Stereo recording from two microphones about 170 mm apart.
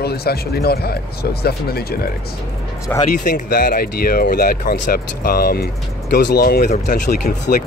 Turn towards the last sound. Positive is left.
turn(degrees=60)  # may be behind; listen again after turning